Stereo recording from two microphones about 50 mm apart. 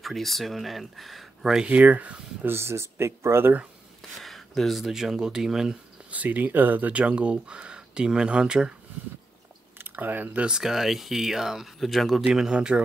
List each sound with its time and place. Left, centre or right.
0.0 s speech: centre
1.4 s speech: centre
1.7 s speech: right
2.4 s speech: right
4.2 s speech: centre
6.0 s speech: right; by 8.7 s centre
9.8 s speech: right
10.4 s speech: centre
12.4 s speech: centre